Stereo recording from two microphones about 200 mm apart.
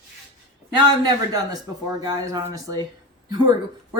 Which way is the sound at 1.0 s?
20° right (ahead or behind).